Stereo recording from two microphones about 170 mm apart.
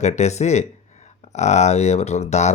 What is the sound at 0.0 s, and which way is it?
Speech, 40° left (ahead or behind).